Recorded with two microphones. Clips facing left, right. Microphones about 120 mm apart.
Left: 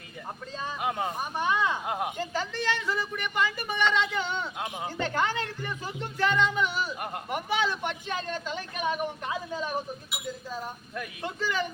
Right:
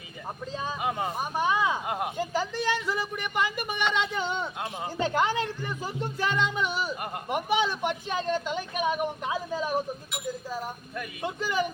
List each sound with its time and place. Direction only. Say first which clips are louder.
0.8 s speech: left 1 dB; centre (ahead or behind)
1.2 s speech: right 2 dB; 15° right (ahead or behind)